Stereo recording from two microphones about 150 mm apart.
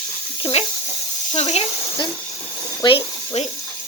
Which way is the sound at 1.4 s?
45° left (ahead or behind).